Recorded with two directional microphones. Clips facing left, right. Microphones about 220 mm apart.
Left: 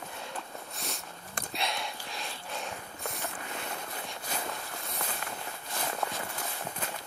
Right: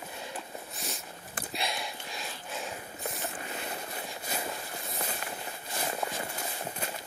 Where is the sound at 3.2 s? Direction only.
20° right (ahead or behind).